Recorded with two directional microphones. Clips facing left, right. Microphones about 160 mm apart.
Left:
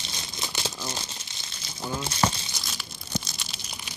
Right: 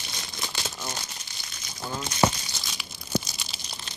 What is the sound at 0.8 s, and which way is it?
Crumpling, 25° left (ahead or behind).